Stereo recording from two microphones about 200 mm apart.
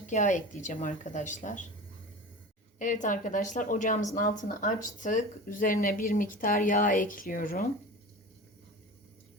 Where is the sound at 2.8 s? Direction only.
40° left (ahead or behind).